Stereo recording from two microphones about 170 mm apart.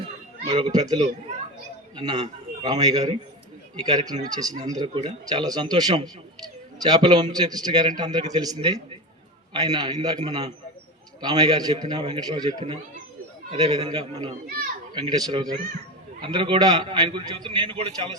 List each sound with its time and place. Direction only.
0.4 s a man's voice: 35° right (ahead or behind)
0.7 s a man's voice: 25° right (ahead or behind)
13.5 s a man's voice: 40° right (ahead or behind)
14.9 s a man's voice: 25° right (ahead or behind)